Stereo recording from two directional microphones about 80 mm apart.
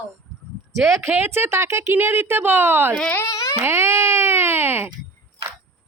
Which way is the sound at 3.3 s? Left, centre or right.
Left.